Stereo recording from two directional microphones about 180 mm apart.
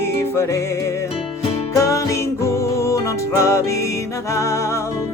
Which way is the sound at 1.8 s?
15° left (ahead or behind).